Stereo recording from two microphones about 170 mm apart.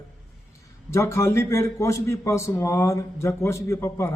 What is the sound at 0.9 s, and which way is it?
Speech, 15° left (ahead or behind).